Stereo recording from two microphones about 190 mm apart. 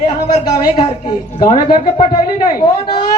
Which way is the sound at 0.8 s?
30° left (ahead or behind).